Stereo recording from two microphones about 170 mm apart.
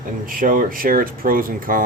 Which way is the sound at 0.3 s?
55° right (ahead or behind).